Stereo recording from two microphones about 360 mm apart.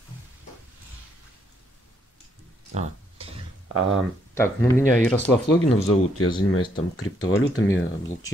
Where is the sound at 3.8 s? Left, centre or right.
Right.